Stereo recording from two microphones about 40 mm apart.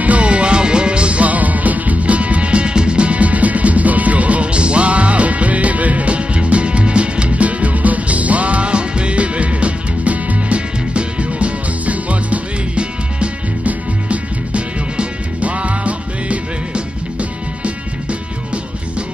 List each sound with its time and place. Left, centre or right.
0.0 s music: right